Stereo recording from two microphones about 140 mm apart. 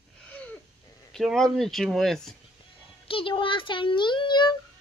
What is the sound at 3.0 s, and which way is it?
A child's voice, 40° left (ahead or behind).